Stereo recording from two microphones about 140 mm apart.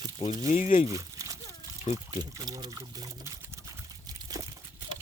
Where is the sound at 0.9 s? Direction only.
25° right (ahead or behind).